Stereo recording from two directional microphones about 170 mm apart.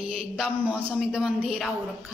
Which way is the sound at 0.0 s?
35° right (ahead or behind).